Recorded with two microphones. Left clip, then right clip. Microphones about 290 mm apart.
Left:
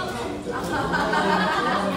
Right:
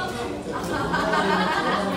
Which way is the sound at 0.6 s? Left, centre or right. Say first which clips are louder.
Even; centre.